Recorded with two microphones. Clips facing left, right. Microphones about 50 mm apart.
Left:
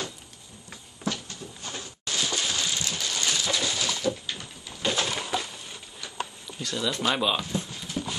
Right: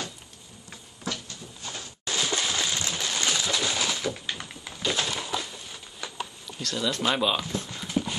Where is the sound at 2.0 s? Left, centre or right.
Right.